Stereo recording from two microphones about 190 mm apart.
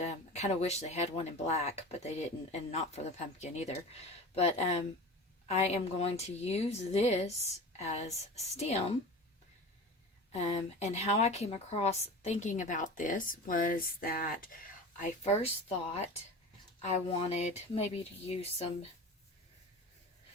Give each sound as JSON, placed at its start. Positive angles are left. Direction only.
{"t": 0.0, "sound": "a woman's voice", "side_deg": 35}
{"t": 10.3, "sound": "a woman's voice", "side_deg": 35}
{"t": 16.8, "sound": "a woman's voice", "side_deg": 30}